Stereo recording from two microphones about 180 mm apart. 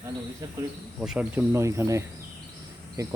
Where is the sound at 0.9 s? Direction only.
5° right (ahead or behind).